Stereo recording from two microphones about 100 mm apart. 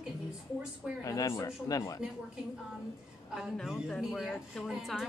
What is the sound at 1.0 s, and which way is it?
Speech, 35° left (ahead or behind).